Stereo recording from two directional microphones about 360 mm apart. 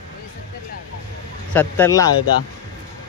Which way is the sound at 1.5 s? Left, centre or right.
Centre.